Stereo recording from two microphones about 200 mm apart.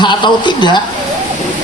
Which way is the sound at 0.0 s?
20° left (ahead or behind).